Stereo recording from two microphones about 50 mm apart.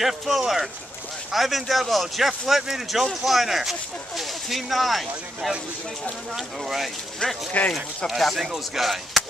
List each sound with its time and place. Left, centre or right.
0.0 s speech: centre
7.6 s speech: left
8.1 s speech: centre